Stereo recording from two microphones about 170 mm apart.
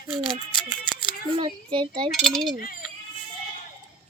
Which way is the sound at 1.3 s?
30° right (ahead or behind).